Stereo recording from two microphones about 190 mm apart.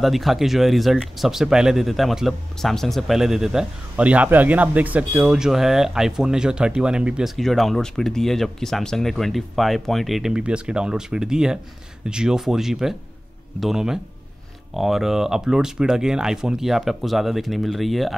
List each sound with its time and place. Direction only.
0.0 s speech: centre (ahead or behind)